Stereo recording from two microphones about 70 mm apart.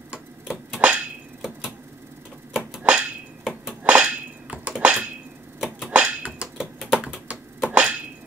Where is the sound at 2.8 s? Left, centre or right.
Centre.